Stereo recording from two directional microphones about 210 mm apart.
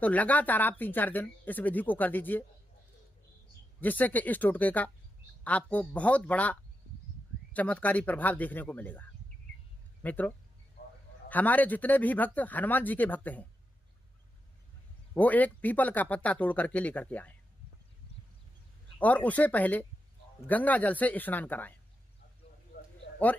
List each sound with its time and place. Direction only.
0.0 s speech: 5° left (ahead or behind)
3.8 s speech: 10° left (ahead or behind)
15.1 s speech: 10° left (ahead or behind)
18.9 s speech: 5° left (ahead or behind)